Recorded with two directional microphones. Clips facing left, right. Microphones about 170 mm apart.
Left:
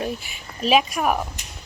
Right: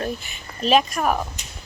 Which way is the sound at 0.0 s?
10° left (ahead or behind).